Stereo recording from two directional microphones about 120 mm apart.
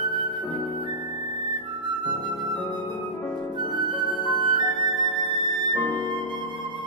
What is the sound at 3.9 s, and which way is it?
Music, 40° left (ahead or behind).